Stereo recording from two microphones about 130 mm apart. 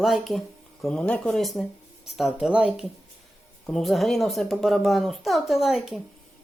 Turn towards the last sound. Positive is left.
turn(degrees=0)  # may be behind; listen again after turning